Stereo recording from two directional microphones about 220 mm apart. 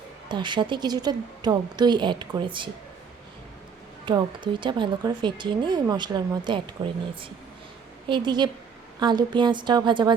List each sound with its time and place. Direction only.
0.3 s a woman's voice: 20° right (ahead or behind)
4.1 s a woman's voice: 20° right (ahead or behind)
8.0 s a woman's voice: 20° right (ahead or behind)